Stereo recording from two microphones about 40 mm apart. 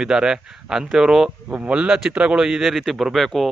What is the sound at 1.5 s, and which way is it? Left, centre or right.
Speech, right.